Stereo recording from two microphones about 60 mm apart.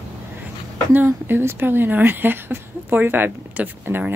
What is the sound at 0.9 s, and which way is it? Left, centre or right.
Speech, right.